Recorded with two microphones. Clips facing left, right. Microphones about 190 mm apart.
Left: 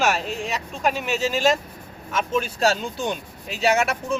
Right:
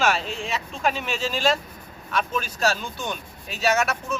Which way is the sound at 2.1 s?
30° left (ahead or behind).